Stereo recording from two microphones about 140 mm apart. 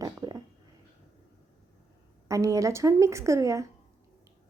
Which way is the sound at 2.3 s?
25° right (ahead or behind).